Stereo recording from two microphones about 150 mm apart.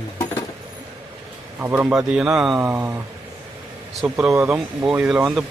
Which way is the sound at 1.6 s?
10° right (ahead or behind).